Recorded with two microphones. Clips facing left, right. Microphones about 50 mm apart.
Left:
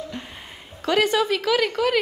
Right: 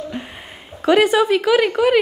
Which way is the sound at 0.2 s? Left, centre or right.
Centre.